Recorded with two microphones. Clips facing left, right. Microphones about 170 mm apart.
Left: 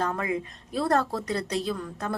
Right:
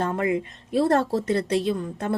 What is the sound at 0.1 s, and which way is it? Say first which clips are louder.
Speech: right 5 dB; 25° right (ahead or behind).